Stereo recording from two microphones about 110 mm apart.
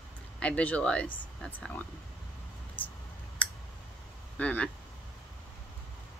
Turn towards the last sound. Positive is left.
turn(degrees=15)  # may be behind; listen again after turning